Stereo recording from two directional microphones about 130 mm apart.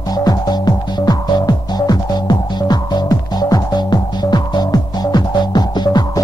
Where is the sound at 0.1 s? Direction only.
30° left (ahead or behind).